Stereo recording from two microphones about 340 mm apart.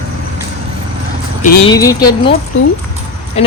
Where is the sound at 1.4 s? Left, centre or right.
Centre.